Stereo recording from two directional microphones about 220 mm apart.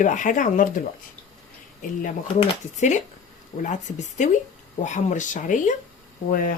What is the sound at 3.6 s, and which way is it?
Speech, 35° left (ahead or behind).